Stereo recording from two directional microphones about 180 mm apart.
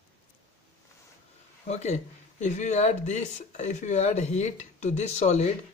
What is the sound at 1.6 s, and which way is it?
Speech, 40° left (ahead or behind).